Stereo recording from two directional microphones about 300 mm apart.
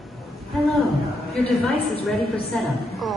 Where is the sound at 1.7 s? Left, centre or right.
Centre.